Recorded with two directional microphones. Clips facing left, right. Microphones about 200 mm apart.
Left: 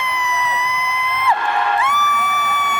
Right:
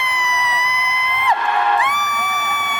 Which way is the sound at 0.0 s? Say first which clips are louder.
Left 1 dB; 15° right (ahead or behind).